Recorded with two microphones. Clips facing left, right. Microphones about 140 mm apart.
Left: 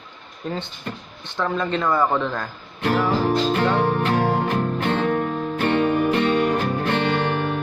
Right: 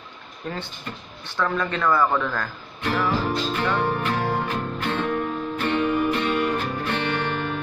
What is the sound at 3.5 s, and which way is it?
Music, 50° left (ahead or behind).